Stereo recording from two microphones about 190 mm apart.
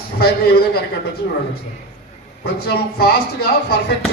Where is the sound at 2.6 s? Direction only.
60° left (ahead or behind).